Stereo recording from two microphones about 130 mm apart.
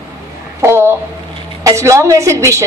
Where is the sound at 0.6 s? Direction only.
20° right (ahead or behind).